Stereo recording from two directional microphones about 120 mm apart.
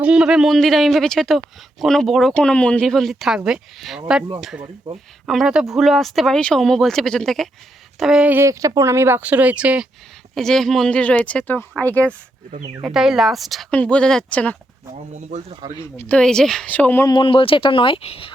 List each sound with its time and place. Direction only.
0.0 s speech: 5° right (ahead or behind)
8.4 s speech: 25° right (ahead or behind); by 9.8 s 10° right (ahead or behind)
10.3 s speech: 5° left (ahead or behind)
12.8 s speech: 5° right (ahead or behind)
13.7 s speech: 10° left (ahead or behind)
14.9 s speech: 70° right (ahead or behind)
16.0 s speech: 10° left (ahead or behind)
17.1 s speech: 45° left (ahead or behind)